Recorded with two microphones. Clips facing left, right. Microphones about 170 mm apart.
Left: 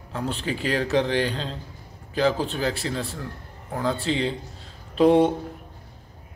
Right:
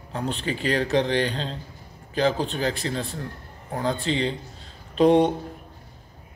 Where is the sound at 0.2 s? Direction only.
Centre (ahead or behind).